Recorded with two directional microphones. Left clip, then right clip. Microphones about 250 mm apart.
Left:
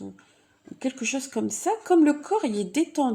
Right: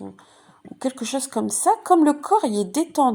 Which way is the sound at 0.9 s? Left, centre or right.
Centre.